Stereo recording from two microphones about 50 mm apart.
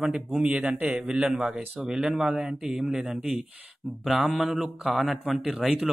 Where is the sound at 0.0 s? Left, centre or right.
Centre.